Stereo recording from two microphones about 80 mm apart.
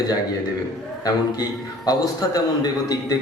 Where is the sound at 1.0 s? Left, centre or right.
Left.